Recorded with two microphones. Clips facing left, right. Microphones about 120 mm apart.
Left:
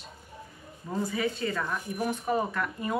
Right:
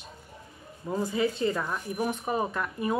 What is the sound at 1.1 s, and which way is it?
Speech, 20° right (ahead or behind).